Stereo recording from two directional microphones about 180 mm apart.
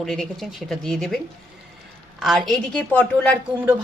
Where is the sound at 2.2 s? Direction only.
Centre (ahead or behind).